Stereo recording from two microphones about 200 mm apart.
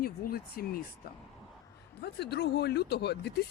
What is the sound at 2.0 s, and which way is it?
Speech, 55° left (ahead or behind).